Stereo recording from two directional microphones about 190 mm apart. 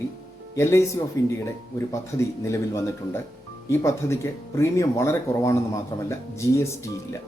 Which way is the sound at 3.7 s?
15° left (ahead or behind).